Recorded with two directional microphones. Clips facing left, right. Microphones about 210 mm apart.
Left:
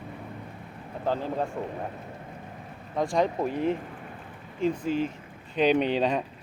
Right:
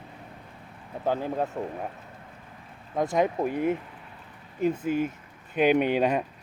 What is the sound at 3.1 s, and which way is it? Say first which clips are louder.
Speech: right 1 dB; 10° right (ahead or behind).